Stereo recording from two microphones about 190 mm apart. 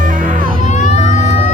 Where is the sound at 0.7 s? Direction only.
40° left (ahead or behind).